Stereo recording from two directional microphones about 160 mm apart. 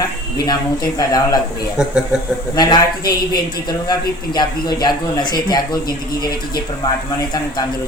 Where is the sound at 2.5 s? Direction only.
25° left (ahead or behind).